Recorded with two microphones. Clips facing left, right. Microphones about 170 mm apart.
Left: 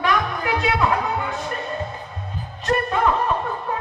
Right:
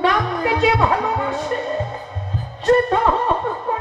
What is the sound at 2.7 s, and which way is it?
Music, 30° right (ahead or behind).